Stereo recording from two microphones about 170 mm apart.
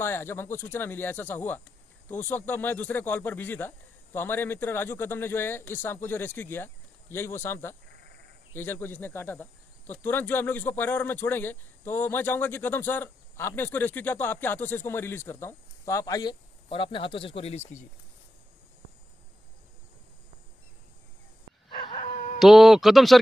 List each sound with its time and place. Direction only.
0.0 s speech: 15° left (ahead or behind); by 17.7 s 40° left (ahead or behind)
21.6 s dog: 30° left (ahead or behind)
22.4 s speech: centre (ahead or behind)